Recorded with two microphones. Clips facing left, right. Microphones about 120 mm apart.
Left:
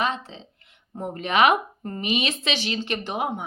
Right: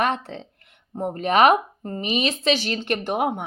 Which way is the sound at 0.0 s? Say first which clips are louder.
Right 3 dB; 60° right (ahead or behind).